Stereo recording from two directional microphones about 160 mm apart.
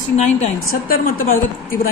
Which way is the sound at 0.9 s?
60° left (ahead or behind).